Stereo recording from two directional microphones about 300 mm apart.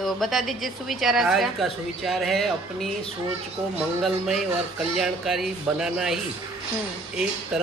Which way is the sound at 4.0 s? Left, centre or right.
Centre.